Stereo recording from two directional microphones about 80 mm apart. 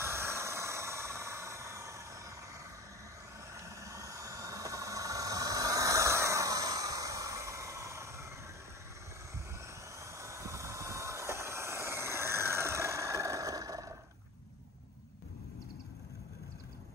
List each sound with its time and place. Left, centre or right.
0.0 s vehicle: right
3.5 s vehicle: right
9.9 s vehicle: right